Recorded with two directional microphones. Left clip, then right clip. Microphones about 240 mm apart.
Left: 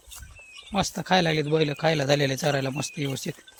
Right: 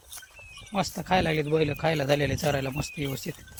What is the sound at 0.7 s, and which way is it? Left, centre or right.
A man's voice, left.